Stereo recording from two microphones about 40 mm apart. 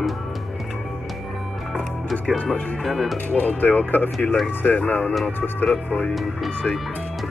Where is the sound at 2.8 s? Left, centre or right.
Centre.